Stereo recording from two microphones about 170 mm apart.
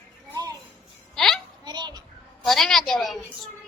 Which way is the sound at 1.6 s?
25° right (ahead or behind).